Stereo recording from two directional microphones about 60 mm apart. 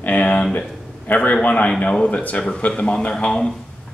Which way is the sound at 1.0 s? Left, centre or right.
Left.